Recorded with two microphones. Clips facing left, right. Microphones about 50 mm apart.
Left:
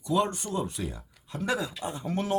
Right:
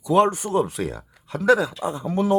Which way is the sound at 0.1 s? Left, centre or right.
Right.